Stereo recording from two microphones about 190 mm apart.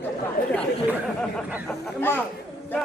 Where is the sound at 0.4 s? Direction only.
50° left (ahead or behind).